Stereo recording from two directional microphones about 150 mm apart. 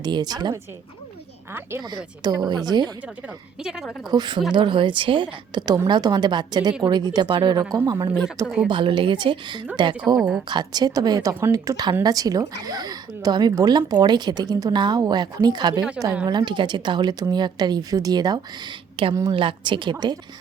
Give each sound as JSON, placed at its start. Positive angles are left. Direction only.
{"t": 0.0, "sound": "a woman's voice", "side_deg": -30}
{"t": 1.8, "sound": "a woman's voice", "side_deg": -30}
{"t": 3.6, "sound": "speech", "side_deg": -5}
{"t": 4.1, "sound": "a woman's voice", "side_deg": -30}
{"t": 8.4, "sound": "speech", "side_deg": -5}
{"t": 8.7, "sound": "speech", "side_deg": -35}
{"t": 10.2, "sound": "speech", "side_deg": -5}
{"t": 10.5, "sound": "a woman's voice", "side_deg": -30}